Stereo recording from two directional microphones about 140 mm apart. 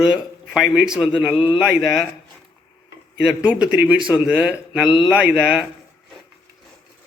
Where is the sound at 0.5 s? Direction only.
5° right (ahead or behind).